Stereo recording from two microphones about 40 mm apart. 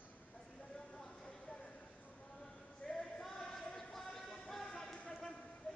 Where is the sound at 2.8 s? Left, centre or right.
Left.